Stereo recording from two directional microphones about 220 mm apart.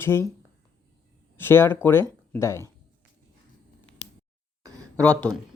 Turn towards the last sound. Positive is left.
turn(degrees=5)  # may be behind; listen again after turning